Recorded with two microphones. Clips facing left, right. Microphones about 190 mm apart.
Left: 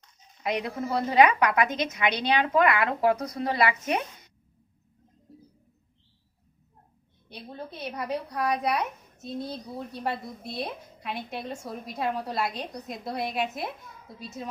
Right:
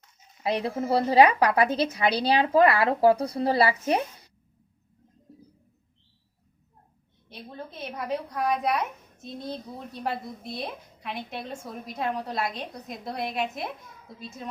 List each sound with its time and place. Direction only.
0.4 s a woman's voice: 30° right (ahead or behind)
7.3 s a woman's voice: centre (ahead or behind)